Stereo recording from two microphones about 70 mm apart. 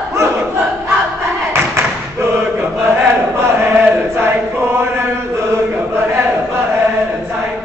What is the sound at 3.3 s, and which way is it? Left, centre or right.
Chant, right.